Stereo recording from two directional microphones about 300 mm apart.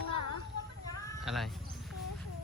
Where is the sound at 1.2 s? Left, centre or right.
Centre.